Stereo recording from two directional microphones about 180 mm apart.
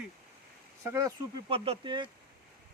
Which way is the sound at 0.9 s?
20° right (ahead or behind).